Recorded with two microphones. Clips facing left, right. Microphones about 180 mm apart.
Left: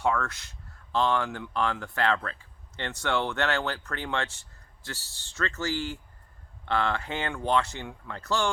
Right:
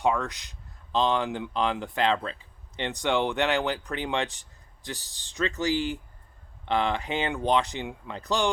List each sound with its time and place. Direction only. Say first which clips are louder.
0.0 s speech: right 2 dB; 15° right (ahead or behind)